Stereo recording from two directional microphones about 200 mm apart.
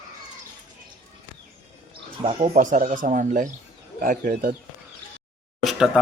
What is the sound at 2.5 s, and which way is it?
Speech, 40° right (ahead or behind).